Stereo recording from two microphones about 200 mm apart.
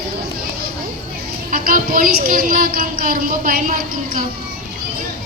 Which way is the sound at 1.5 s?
45° right (ahead or behind).